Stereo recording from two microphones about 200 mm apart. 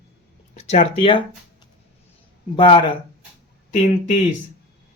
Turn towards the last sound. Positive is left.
turn(degrees=40)  # may be behind; listen again after turning